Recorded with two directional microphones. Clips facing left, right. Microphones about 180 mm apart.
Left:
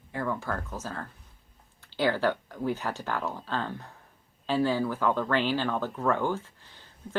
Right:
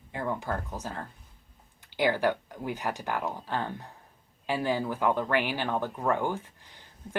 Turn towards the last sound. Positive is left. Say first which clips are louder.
# even
turn(degrees=-15)  # may be behind; listen again after turning